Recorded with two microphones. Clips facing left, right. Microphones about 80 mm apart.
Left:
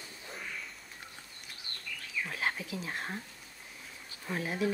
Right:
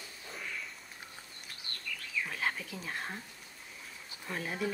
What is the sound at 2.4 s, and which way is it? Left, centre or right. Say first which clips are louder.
Speech: left 1 dB; centre.